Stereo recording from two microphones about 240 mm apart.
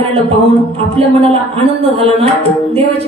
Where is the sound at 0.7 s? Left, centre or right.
Right.